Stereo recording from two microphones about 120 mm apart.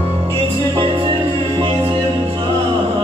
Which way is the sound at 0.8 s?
45° right (ahead or behind).